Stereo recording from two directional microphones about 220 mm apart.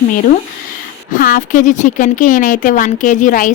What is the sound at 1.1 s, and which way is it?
Speech, 40° left (ahead or behind).